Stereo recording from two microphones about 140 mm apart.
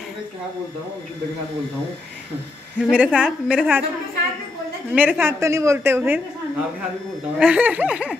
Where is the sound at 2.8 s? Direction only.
5° right (ahead or behind).